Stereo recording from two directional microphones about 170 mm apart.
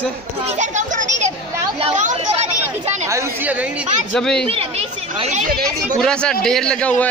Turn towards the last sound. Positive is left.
turn(degrees=10)  # may be behind; listen again after turning